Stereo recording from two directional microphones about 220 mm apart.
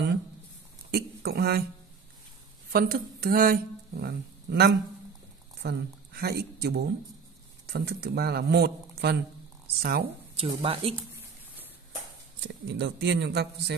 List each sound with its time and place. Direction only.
0.9 s speech: 45° right (ahead or behind)
2.7 s speech: 40° right (ahead or behind)
10.3 s speech: 25° right (ahead or behind)
12.4 s speech: 55° right (ahead or behind)